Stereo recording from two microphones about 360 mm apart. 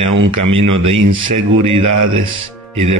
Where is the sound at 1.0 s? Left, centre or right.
Right.